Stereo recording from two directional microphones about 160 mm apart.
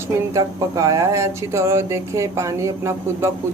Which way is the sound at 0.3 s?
20° right (ahead or behind).